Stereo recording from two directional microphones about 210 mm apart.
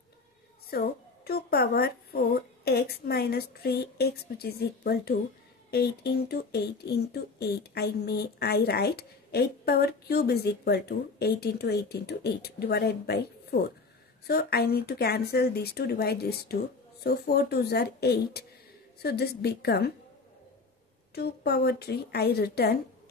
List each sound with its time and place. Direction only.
0.7 s a woman's voice: 45° left (ahead or behind)
21.1 s speech: 50° left (ahead or behind)